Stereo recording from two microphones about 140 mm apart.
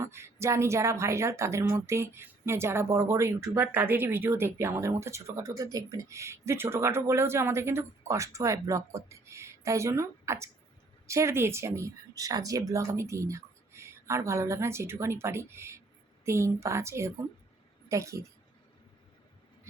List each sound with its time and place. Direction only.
0.0 s a woman's voice: 20° right (ahead or behind)